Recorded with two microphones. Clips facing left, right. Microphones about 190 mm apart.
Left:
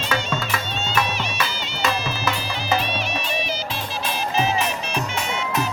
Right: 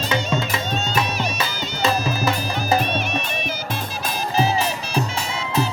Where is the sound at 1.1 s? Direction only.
40° right (ahead or behind).